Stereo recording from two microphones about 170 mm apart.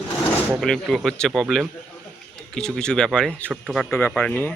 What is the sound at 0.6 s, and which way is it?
Speech, centre (ahead or behind).